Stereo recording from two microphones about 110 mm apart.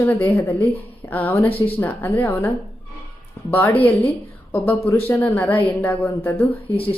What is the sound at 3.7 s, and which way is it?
Speech, 60° left (ahead or behind).